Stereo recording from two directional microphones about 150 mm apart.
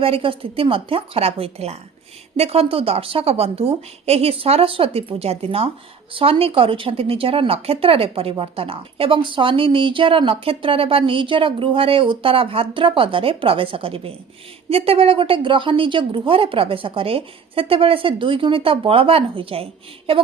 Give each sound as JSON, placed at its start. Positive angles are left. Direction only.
{"t": 0.0, "sound": "speech", "side_deg": -40}